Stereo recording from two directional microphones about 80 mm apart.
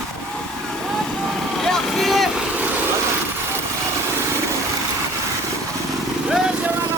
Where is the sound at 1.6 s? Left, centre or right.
Centre.